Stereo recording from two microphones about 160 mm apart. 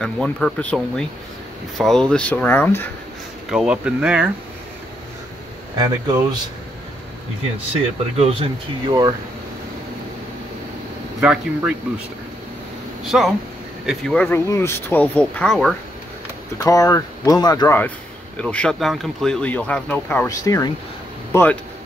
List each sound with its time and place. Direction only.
0.0 s speech: 5° left (ahead or behind)
1.8 s speech: centre (ahead or behind)
3.4 s speech: 5° right (ahead or behind)
5.8 s speech: 25° right (ahead or behind)
8.2 s speech: 35° right (ahead or behind)
11.1 s speech: 5° right (ahead or behind)
13.0 s speech: centre (ahead or behind)
16.6 s speech: 20° left (ahead or behind)
18.4 s speech: 5° left (ahead or behind)
20.2 s speech: 20° left (ahead or behind)